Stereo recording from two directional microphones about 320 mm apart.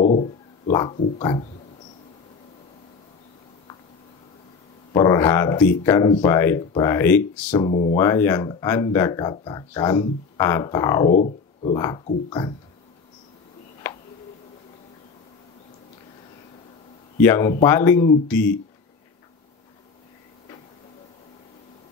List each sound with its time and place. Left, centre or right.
0.0 s a sound: left
4.9 s speech: centre
11.1 s speech: left
11.7 s speech: centre
17.2 s speech: centre